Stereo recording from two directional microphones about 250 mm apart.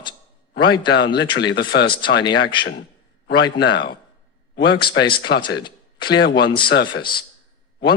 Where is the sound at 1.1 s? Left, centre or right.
Centre.